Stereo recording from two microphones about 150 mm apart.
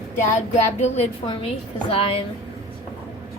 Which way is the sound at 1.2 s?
35° left (ahead or behind).